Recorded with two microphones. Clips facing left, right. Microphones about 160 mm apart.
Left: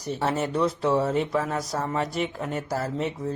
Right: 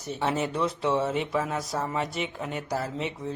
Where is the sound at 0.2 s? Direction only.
Centre (ahead or behind).